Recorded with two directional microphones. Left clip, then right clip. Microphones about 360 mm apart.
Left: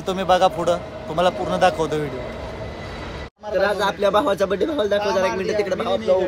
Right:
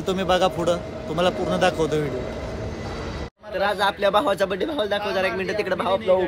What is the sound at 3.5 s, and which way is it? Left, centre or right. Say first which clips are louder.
A man's voice: left 2 dB; centre.